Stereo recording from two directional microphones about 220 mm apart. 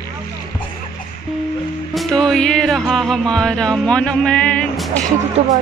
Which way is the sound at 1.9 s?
Centre (ahead or behind).